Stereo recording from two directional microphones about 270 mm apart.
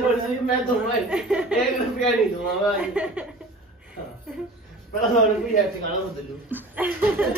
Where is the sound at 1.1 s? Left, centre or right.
Centre.